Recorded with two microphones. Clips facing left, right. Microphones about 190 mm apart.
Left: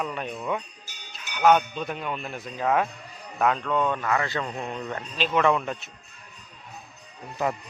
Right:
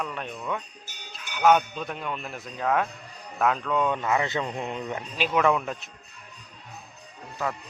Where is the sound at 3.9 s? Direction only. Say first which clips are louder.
Right 1 dB; 20° right (ahead or behind); by 5.7 s centre (ahead or behind).